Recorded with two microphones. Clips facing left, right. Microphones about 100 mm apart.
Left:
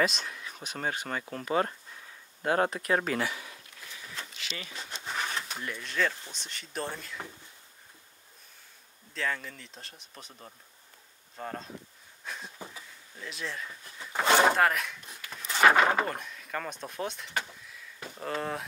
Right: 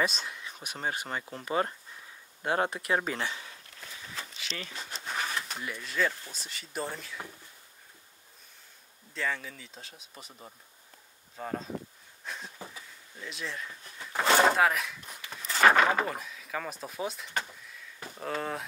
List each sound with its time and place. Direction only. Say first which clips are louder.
0.1 s speech: even; centre (ahead or behind)
0.7 s speech: left 1 dB; 15° right (ahead or behind)
3.2 s speech: left 3 dB; 30° right (ahead or behind)
4.2 s a sound: right 1 dB; centre (ahead or behind)
6.3 s speech: even; 5° right (ahead or behind)
9.1 s speech: even; centre (ahead or behind)
12.3 s a sound: even; centre (ahead or behind)
13.2 s speech: left 1 dB; centre (ahead or behind)